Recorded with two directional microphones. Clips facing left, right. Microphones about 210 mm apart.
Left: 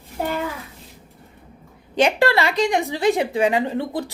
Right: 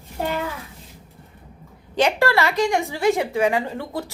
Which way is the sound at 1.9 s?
15° left (ahead or behind).